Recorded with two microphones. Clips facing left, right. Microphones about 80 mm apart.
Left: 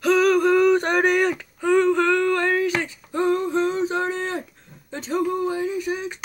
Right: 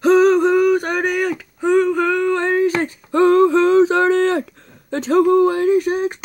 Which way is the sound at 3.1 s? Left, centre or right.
Right.